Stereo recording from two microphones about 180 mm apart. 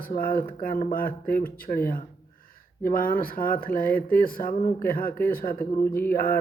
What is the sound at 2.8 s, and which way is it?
Speech, 55° left (ahead or behind).